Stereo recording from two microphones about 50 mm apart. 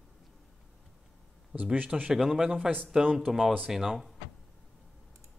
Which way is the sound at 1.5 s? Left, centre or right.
Right.